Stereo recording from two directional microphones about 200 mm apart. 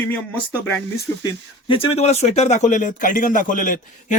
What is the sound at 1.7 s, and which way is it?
Speech, 30° left (ahead or behind).